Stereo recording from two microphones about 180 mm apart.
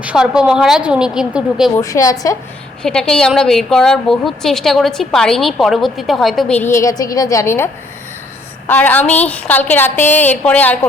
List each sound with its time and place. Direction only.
0.0 s a woman's voice: 5° right (ahead or behind)
1.7 s a woman's voice: 15° left (ahead or behind)
2.8 s a woman's voice: 5° left (ahead or behind)